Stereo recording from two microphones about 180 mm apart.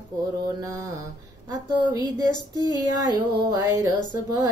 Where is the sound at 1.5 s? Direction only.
20° right (ahead or behind).